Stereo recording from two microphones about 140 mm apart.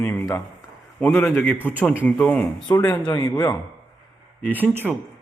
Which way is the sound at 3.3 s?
10° left (ahead or behind).